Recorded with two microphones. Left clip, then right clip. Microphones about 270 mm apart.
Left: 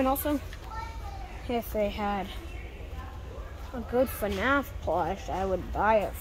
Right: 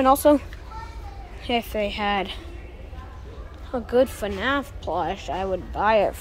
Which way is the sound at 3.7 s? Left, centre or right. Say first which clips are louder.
Right 11 dB; centre.